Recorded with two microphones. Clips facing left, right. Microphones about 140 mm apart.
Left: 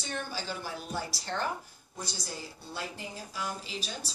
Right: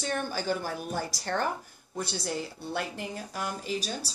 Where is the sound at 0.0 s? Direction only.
55° right (ahead or behind).